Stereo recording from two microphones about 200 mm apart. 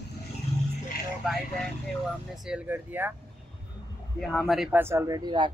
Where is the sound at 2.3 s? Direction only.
5° right (ahead or behind).